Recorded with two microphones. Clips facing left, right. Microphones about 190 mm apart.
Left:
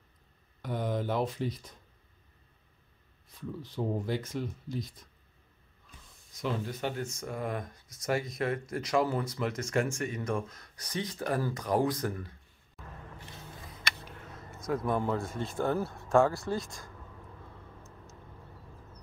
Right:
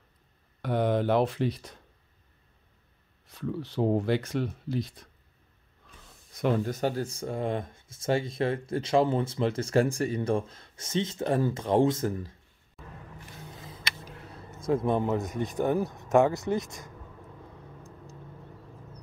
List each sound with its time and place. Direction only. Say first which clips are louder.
0.6 s speech: right 7 dB; 70° right (ahead or behind)
3.3 s speech: right 7 dB; 75° right (ahead or behind)
6.3 s speech: right 7 dB; 50° right (ahead or behind); by 12.2 s 25° right (ahead or behind)
14.0 s a sound: right 2 dB; 40° right (ahead or behind)
14.7 s speech: right 4 dB; 25° right (ahead or behind)